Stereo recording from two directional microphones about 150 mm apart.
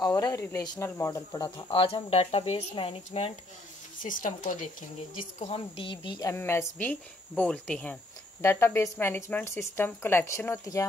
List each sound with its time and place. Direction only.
0.0 s speech: 25° left (ahead or behind); by 3.3 s 45° left (ahead or behind)
4.0 s speech: 60° left (ahead or behind)
5.4 s speech: 35° left (ahead or behind)
6.2 s speech: 15° left (ahead or behind)